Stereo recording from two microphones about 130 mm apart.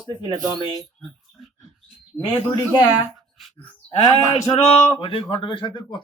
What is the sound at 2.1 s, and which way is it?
Speech, 10° left (ahead or behind).